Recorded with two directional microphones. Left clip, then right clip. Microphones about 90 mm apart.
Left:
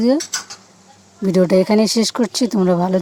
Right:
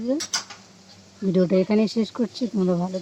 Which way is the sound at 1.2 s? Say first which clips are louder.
Left 7 dB; 30° left (ahead or behind).